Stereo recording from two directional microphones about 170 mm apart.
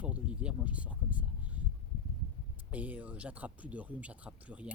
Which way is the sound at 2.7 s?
10° right (ahead or behind).